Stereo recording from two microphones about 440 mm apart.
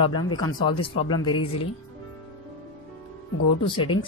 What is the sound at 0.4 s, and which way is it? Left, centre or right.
Speech, centre.